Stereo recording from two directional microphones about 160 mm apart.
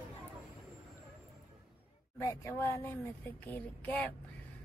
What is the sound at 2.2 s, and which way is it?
Speech, 20° left (ahead or behind).